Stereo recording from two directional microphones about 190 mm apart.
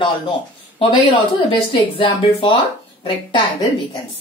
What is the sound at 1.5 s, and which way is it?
Speech, 25° left (ahead or behind).